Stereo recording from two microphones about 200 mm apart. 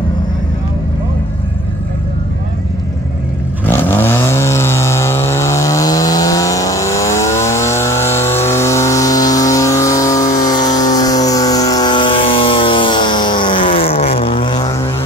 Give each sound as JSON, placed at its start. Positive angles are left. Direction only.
{"t": 3.6, "sound": "vehicle", "side_deg": 10}